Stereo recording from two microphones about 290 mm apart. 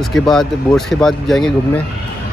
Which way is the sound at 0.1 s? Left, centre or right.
Centre.